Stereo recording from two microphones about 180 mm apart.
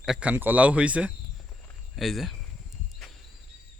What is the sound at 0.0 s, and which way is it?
Speech, 5° right (ahead or behind).